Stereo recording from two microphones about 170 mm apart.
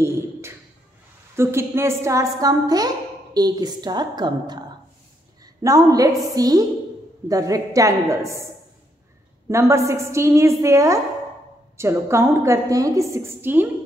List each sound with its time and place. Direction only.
0.0 s a sound: 15° right (ahead or behind)
1.3 s a woman's voice: 15° right (ahead or behind)
9.5 s a woman's voice: 15° right (ahead or behind)